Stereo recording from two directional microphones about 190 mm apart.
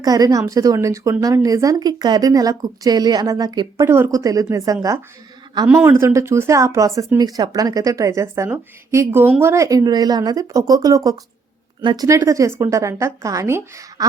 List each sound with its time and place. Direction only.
0.0 s a woman's voice: 20° right (ahead or behind)